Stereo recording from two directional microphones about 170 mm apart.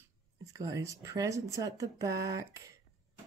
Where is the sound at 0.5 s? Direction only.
20° right (ahead or behind).